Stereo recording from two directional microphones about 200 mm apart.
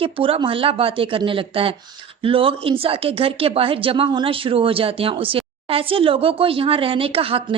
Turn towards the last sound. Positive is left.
turn(degrees=-30)  # may be behind; listen again after turning